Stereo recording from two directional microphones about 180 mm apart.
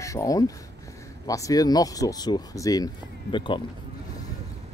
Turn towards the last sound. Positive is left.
turn(degrees=25)  # may be behind; listen again after turning